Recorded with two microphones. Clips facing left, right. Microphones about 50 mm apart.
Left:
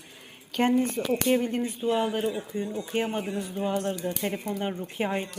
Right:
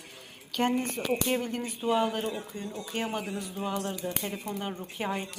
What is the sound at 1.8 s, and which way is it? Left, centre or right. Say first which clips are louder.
A man's voice: left 1 dB; centre.